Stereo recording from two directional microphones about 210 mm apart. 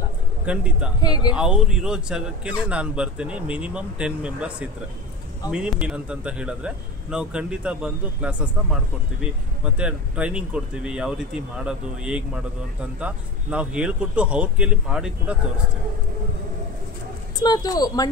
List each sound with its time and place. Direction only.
0.5 s speech: 5° right (ahead or behind)
1.0 s speech: 20° left (ahead or behind)
1.3 s speech: 5° right (ahead or behind)
9.8 s speech: 5° right (ahead or behind)
17.4 s speech: 20° left (ahead or behind)